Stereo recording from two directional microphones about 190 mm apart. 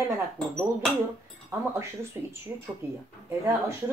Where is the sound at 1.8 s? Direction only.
15° right (ahead or behind).